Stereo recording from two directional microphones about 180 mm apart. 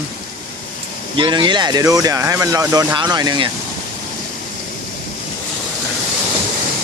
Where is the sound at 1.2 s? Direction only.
25° right (ahead or behind).